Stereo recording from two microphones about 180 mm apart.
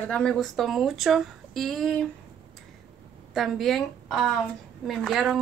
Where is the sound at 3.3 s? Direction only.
Centre (ahead or behind).